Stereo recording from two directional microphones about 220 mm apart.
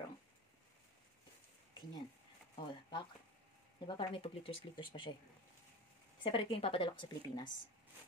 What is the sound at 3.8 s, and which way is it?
Speech, 20° left (ahead or behind).